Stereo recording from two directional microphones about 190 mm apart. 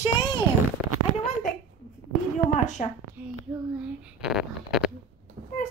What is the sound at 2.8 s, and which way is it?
Speech, 40° left (ahead or behind).